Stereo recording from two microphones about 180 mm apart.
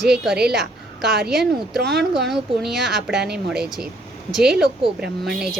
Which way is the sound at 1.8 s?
65° right (ahead or behind).